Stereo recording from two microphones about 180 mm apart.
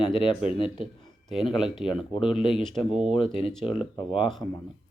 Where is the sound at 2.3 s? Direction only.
30° left (ahead or behind).